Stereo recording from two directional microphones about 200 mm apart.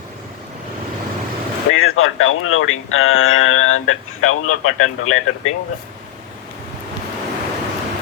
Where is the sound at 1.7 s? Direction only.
90° left.